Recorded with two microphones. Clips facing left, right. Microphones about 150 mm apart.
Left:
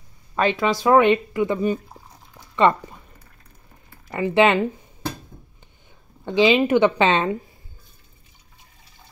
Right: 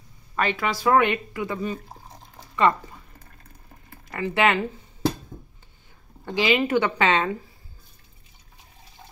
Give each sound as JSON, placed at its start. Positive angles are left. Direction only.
{"t": 0.4, "sound": "speech", "side_deg": 25}
{"t": 4.1, "sound": "speech", "side_deg": 20}
{"t": 6.2, "sound": "speech", "side_deg": 25}